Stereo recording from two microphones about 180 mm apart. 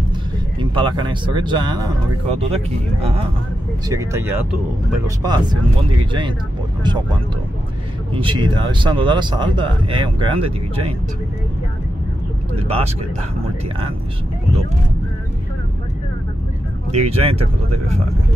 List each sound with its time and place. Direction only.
0.6 s speech: 25° right (ahead or behind)
2.5 s speech: 35° right (ahead or behind)
3.9 s speech: 15° right (ahead or behind); by 11.0 s 30° right (ahead or behind)
16.9 s speech: 35° right (ahead or behind)